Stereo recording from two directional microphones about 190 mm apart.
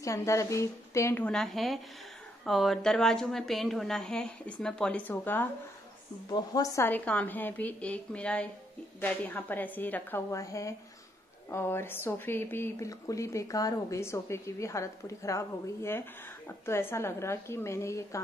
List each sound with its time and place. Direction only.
0.0 s a woman's voice: 15° left (ahead or behind)